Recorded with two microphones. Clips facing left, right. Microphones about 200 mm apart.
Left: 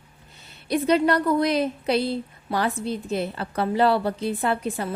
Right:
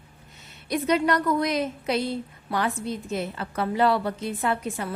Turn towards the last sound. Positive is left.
turn(degrees=35)  # may be behind; listen again after turning